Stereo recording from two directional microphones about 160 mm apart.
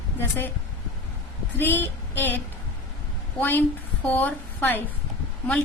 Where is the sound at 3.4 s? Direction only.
10° left (ahead or behind).